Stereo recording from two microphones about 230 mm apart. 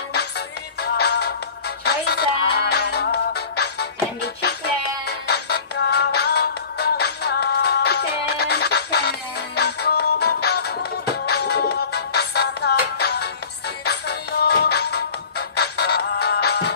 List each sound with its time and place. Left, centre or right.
0.7 s music: left